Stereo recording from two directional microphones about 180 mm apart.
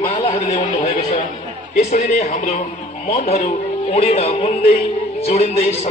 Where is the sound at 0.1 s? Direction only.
30° left (ahead or behind).